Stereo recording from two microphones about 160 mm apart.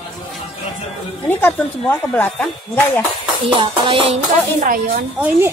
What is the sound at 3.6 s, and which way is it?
Music, 35° right (ahead or behind).